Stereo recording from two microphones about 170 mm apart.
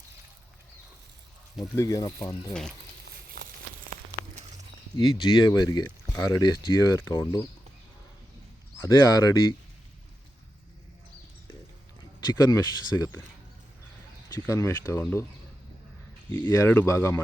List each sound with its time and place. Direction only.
1.7 s speech: 20° left (ahead or behind)
2.2 s speech: 5° left (ahead or behind)
3.1 s a sound: 60° right (ahead or behind)
4.9 s speech: 25° left (ahead or behind)
8.8 s speech: 20° left (ahead or behind)
12.3 s speech: 20° left (ahead or behind)
14.3 s speech: 20° left (ahead or behind)
16.5 s speech: 15° left (ahead or behind)